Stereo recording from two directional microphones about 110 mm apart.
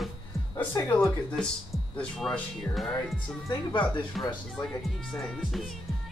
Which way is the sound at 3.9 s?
40° left (ahead or behind).